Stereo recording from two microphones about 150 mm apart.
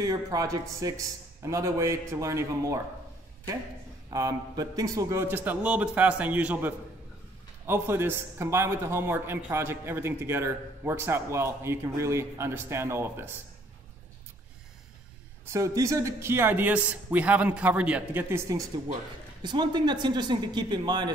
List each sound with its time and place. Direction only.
0.0 s speech: 25° right (ahead or behind)
4.1 s a man's voice: 25° right (ahead or behind)
15.4 s a man's voice: 20° right (ahead or behind)
19.4 s speech: 30° right (ahead or behind)